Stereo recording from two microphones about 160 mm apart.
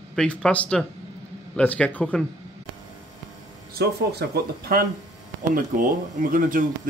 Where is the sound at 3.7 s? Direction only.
90° right.